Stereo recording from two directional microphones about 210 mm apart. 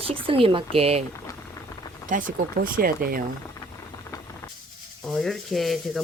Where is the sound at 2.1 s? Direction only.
40° right (ahead or behind).